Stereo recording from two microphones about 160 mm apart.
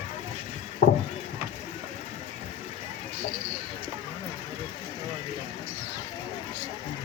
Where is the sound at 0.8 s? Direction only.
75° left (ahead or behind).